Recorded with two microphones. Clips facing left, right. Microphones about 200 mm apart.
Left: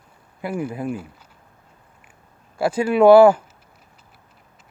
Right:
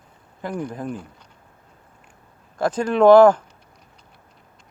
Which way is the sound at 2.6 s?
10° left (ahead or behind).